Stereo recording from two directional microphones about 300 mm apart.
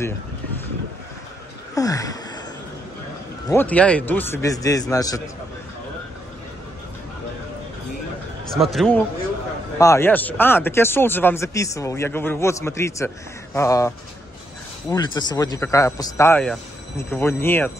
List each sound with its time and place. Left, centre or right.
1.8 s a sound: centre
3.4 s speech: centre
8.5 s a man's voice: centre